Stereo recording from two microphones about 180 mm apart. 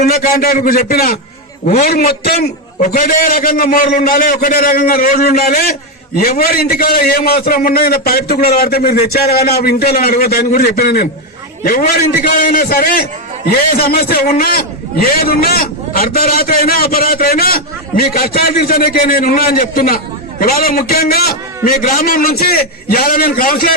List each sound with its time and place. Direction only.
0.0 s a man's voice: 55° left (ahead or behind)
1.6 s a man's voice: 40° left (ahead or behind)
2.8 s a man's voice: 50° left (ahead or behind)